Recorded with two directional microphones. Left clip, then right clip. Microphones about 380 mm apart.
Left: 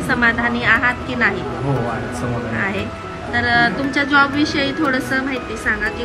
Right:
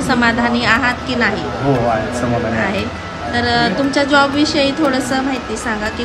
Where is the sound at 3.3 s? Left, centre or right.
Centre.